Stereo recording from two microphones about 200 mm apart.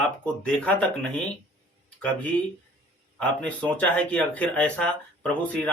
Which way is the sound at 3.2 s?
5° left (ahead or behind).